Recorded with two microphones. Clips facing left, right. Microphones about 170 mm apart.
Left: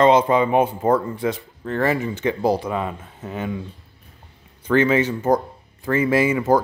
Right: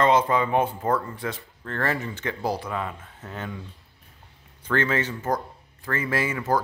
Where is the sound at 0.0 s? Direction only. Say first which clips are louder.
Left 5 dB; 20° left (ahead or behind).